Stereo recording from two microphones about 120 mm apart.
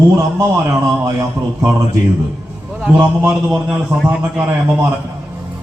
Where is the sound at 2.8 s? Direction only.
10° right (ahead or behind).